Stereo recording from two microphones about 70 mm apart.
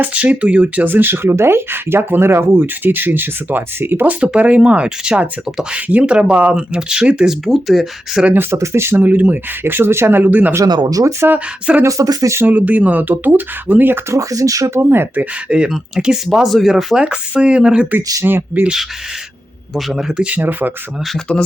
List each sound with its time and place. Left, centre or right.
0.0 s speech: right
7.4 s speech: centre
8.2 s speech: right
8.5 s speech: right
9.0 s speech: right
10.7 s speech: right
12.4 s speech: right
14.1 s speech: right
14.7 s speech: right
15.2 s speech: centre
18.2 s speech: right
19.7 s speech: centre
20.3 s speech: right
21.3 s speech: centre